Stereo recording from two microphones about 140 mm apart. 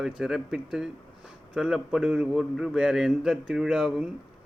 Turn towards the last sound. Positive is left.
turn(degrees=-5)  # may be behind; listen again after turning